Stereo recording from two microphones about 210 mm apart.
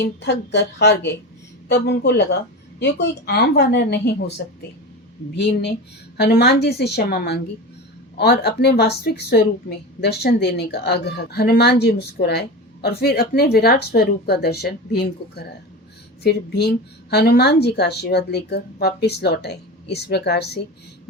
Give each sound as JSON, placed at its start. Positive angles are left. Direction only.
{"t": 0.0, "sound": "a woman's voice", "side_deg": 55}
{"t": 6.1, "sound": "a woman's voice", "side_deg": 50}